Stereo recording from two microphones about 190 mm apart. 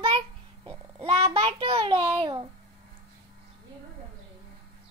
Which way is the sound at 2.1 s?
25° right (ahead or behind).